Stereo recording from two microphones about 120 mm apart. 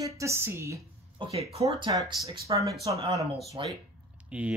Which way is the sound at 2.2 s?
30° right (ahead or behind).